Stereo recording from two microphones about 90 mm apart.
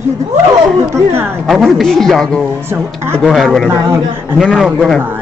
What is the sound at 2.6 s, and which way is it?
Speech, 25° right (ahead or behind).